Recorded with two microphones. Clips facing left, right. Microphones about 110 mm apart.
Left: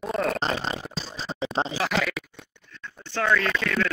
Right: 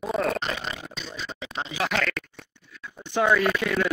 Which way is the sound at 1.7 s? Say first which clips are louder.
Left 1 dB; centre (ahead or behind).